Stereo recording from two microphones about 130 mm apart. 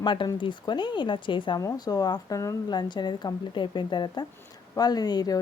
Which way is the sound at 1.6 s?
30° left (ahead or behind).